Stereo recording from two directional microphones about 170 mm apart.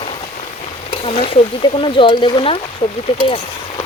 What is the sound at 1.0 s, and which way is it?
Speech, 35° left (ahead or behind).